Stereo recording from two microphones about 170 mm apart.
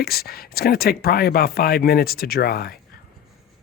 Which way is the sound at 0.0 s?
65° left (ahead or behind).